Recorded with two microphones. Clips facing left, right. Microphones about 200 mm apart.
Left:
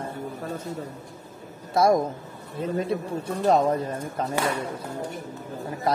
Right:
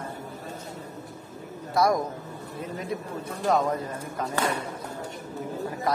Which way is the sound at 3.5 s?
30° left (ahead or behind).